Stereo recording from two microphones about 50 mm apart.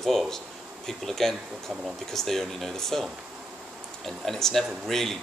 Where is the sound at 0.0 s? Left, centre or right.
Centre.